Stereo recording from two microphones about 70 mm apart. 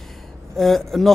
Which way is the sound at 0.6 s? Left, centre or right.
Centre.